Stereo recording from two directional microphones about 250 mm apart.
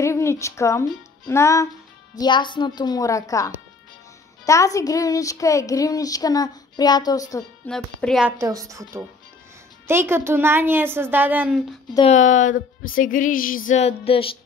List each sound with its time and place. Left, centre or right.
0.0 s speech: centre
7.7 s a woman's voice: centre
11.9 s speech: left